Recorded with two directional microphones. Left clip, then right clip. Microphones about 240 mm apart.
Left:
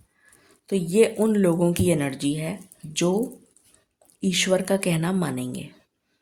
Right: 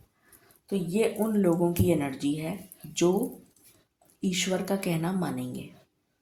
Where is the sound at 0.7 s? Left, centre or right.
Left.